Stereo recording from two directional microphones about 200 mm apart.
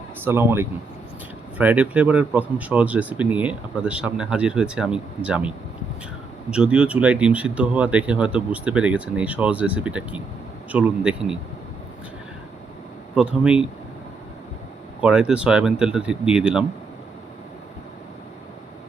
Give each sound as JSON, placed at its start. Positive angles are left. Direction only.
{"t": 0.3, "sound": "speech", "side_deg": -10}
{"t": 13.1, "sound": "speech", "side_deg": -5}
{"t": 15.0, "sound": "speech", "side_deg": -5}